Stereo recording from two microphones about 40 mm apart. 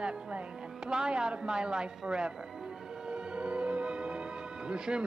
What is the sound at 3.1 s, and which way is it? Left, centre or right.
Music, right.